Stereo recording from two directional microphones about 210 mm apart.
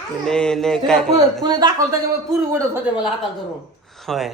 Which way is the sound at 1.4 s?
20° right (ahead or behind).